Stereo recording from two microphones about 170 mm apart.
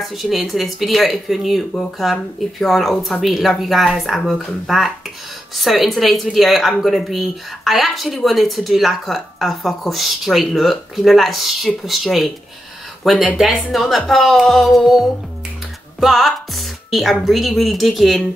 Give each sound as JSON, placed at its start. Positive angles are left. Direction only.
{"t": 0.0, "sound": "speech", "side_deg": 0}